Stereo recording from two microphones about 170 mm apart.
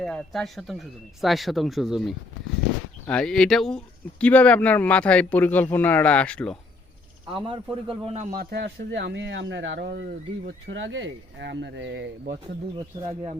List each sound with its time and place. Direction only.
0.0 s speech: centre (ahead or behind)
7.4 s a man's voice: 30° right (ahead or behind)
8.3 s speech: 65° right (ahead or behind); by 12.4 s 90° right